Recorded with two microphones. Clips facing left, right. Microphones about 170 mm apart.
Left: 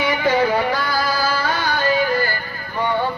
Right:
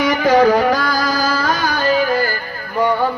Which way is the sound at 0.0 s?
40° right (ahead or behind).